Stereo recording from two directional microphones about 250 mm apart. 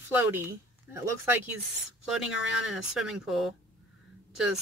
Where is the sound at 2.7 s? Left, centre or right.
Centre.